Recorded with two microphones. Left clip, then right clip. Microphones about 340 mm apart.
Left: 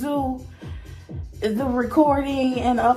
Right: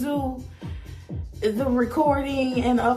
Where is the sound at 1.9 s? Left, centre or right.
Left.